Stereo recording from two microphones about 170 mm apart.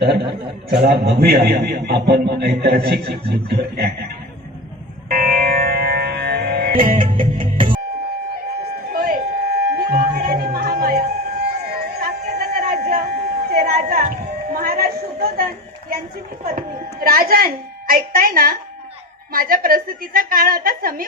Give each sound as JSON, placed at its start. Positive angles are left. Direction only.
{"t": 0.0, "sound": "a man's voice", "side_deg": -80}
{"t": 5.0, "sound": "music", "side_deg": -60}
{"t": 6.9, "sound": "music", "side_deg": -30}
{"t": 8.9, "sound": "a sound", "side_deg": -60}
{"t": 16.5, "sound": "a woman's voice", "side_deg": -60}